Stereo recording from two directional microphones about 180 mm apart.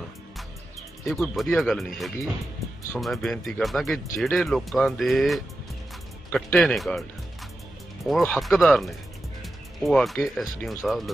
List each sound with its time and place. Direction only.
1.0 s speech: centre (ahead or behind)